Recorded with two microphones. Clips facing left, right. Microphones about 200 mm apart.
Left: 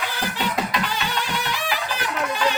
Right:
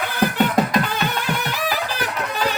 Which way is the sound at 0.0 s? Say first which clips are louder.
Right 7 dB; 55° right (ahead or behind).